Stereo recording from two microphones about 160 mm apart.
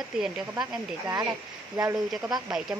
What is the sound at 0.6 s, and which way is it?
Speech, 25° right (ahead or behind).